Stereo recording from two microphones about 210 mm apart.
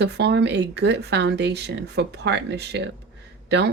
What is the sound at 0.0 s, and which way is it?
Speech, 55° right (ahead or behind).